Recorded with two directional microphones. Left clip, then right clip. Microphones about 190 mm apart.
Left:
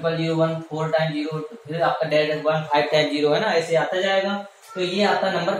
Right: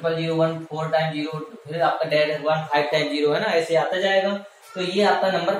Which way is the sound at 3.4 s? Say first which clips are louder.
Even; centre (ahead or behind).